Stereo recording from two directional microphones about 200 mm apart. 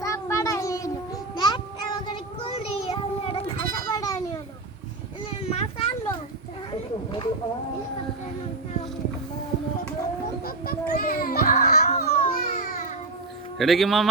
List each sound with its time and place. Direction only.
0.0 s child singing: 15° left (ahead or behind)
3.8 s children playing: 15° left (ahead or behind)
5.4 s a sound: 30° left (ahead or behind)
10.4 s a sound: 45° left (ahead or behind)
12.0 s baby cry: 40° left (ahead or behind)
13.6 s speech: centre (ahead or behind)